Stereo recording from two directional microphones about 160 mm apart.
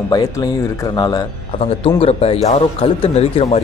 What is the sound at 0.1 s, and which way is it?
A man's voice, 25° left (ahead or behind).